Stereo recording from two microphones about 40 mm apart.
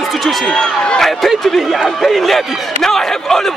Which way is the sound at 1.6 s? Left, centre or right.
Centre.